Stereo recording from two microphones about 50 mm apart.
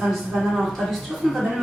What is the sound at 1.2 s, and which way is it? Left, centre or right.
Speech, centre.